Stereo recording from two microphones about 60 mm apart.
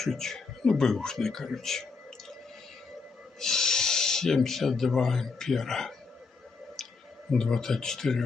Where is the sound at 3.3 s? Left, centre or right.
Centre.